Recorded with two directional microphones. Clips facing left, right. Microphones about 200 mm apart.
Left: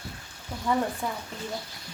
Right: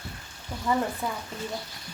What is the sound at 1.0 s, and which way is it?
Speech, 5° right (ahead or behind).